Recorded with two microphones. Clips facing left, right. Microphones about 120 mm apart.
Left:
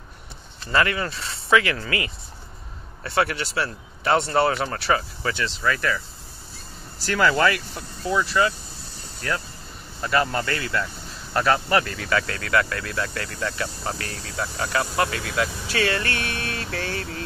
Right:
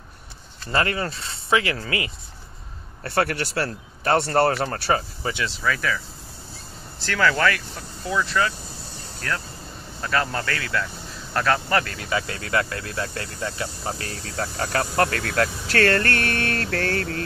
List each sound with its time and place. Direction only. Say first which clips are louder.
0.7 s speech: left 1 dB; 35° right (ahead or behind)
3.0 s speech: even; 50° right (ahead or behind)
5.6 s speech: left 1 dB; centre (ahead or behind)
7.0 s speech: left 1 dB; 15° left (ahead or behind)
8.0 s speech: left 2 dB; 5° left (ahead or behind)
12.1 s speech: left 2 dB; 20° right (ahead or behind)
14.3 s speech: even; 50° right (ahead or behind)